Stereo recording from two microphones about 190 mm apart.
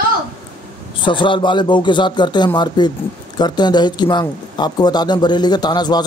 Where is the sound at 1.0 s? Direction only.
25° left (ahead or behind).